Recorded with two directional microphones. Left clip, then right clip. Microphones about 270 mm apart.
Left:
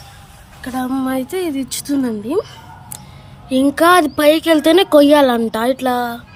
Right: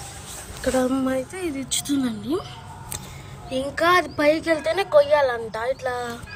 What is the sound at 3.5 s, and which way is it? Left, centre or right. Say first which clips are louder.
Speech: left 8 dB; left.